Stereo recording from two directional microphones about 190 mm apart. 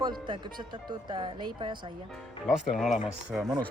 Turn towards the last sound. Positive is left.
turn(degrees=0)  # may be behind; listen again after turning